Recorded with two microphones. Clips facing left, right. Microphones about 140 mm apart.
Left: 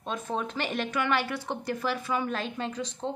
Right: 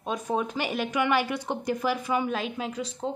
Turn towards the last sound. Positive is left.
turn(degrees=-5)  # may be behind; listen again after turning